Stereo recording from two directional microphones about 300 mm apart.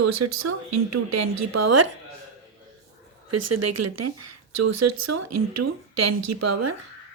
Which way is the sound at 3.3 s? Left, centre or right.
Right.